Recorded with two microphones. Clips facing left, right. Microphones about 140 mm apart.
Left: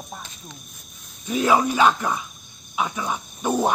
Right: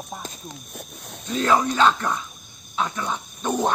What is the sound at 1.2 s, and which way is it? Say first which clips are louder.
Speech: left 1 dB; 10° left (ahead or behind).